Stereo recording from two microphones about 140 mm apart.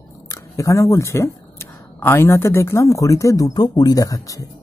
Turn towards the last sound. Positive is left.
turn(degrees=25)  # may be behind; listen again after turning